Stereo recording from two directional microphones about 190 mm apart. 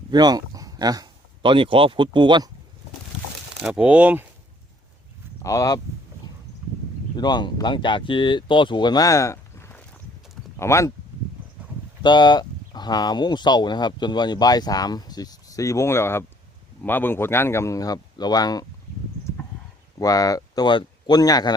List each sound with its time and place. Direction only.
0.1 s speech: 20° right (ahead or behind)
3.6 s speech: 5° right (ahead or behind)
5.4 s speech: 15° left (ahead or behind)
7.2 s speech: 25° left (ahead or behind)
12.0 s speech: 25° left (ahead or behind)
20.0 s speech: 20° left (ahead or behind)